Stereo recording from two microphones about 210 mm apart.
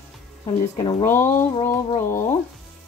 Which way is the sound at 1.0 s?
10° left (ahead or behind).